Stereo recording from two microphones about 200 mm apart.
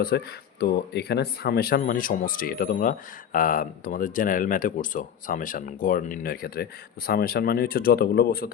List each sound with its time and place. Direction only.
0.0 s speech: 50° left (ahead or behind)